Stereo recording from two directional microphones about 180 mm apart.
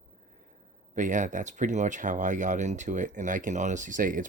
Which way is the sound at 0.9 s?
45° right (ahead or behind).